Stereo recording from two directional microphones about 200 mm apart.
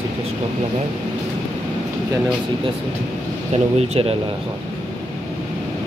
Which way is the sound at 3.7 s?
30° right (ahead or behind).